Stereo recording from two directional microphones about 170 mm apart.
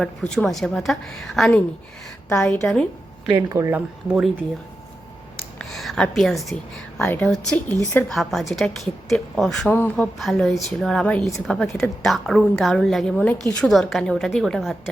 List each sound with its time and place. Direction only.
0.0 s a woman's voice: 5° left (ahead or behind)
3.3 s speech: 15° right (ahead or behind)
5.5 s a woman's voice: centre (ahead or behind)